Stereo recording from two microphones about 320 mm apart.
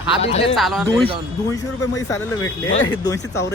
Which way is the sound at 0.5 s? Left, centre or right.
Centre.